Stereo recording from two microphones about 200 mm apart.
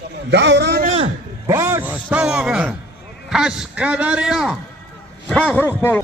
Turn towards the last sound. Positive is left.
turn(degrees=10)  # may be behind; listen again after turning